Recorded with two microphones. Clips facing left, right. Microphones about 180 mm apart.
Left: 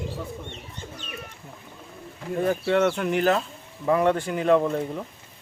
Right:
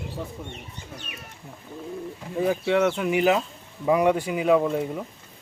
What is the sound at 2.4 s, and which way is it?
Speech, 5° right (ahead or behind).